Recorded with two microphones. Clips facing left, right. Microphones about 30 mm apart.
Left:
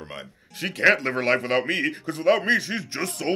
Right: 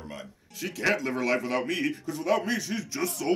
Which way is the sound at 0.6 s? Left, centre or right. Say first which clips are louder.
Left 7 dB; left.